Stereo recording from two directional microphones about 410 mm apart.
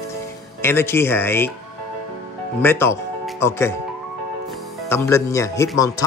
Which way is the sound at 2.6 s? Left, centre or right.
Centre.